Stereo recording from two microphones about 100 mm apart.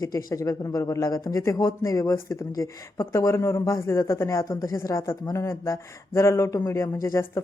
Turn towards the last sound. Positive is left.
turn(degrees=30)  # may be behind; listen again after turning